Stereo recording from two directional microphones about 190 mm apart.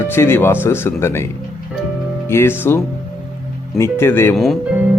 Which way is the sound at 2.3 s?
10° left (ahead or behind).